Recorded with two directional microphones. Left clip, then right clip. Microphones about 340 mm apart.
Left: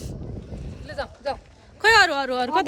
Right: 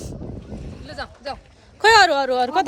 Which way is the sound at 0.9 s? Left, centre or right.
Centre.